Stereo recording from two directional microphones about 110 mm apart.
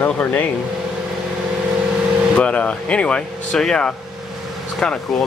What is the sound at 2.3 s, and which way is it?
Speech, 10° left (ahead or behind).